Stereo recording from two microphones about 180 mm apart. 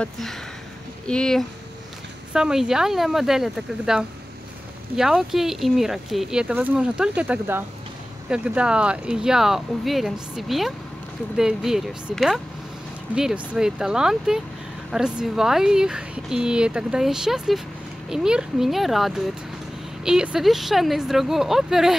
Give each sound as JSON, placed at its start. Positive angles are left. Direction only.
{"t": 0.0, "sound": "speech", "side_deg": 0}